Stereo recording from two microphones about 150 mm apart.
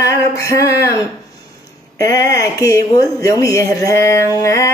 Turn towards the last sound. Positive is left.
turn(degrees=20)  # may be behind; listen again after turning